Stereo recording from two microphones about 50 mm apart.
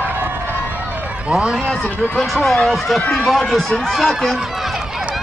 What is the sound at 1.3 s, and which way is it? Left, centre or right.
Speech, centre.